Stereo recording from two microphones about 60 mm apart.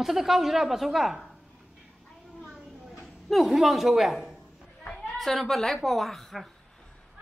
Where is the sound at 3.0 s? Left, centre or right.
Centre.